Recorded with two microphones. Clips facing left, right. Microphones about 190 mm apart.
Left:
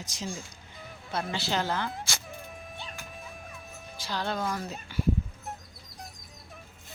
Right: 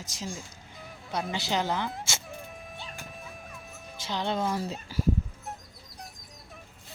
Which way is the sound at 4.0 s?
20° right (ahead or behind).